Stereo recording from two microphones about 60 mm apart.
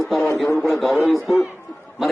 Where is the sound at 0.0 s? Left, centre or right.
Centre.